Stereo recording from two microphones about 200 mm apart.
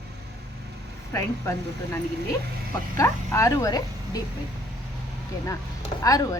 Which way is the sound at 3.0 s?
15° left (ahead or behind).